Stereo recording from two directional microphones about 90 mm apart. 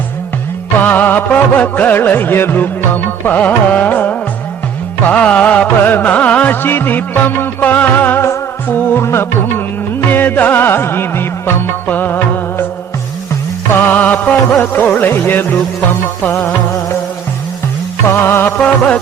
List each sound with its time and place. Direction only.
0.8 s music: 20° left (ahead or behind)
13.7 s music: 20° left (ahead or behind)
18.1 s music: 25° left (ahead or behind)
18.5 s music: 15° left (ahead or behind)